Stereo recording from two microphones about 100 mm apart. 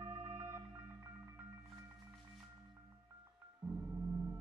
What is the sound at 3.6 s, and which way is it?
Gong, 35° right (ahead or behind).